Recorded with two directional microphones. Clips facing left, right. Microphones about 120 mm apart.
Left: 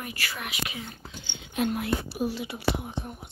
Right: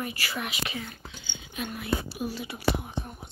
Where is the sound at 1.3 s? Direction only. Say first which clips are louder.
Left 8 dB; 70° left (ahead or behind).